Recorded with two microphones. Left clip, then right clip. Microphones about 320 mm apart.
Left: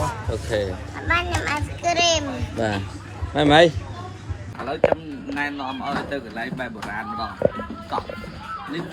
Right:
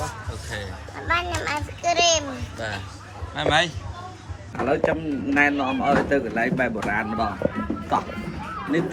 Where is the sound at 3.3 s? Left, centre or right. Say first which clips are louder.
Left 6 dB; centre.